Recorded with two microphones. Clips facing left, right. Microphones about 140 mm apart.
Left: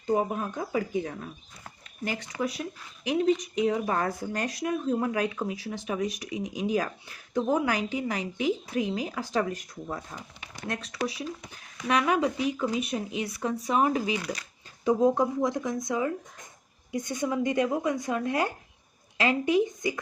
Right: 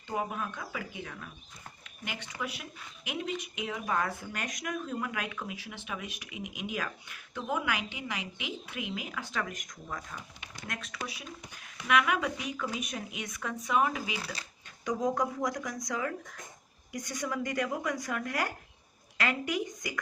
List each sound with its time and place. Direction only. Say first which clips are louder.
0.1 s speech: left 7 dB; 35° left (ahead or behind)
2.4 s speech: left 9 dB; 40° left (ahead or behind)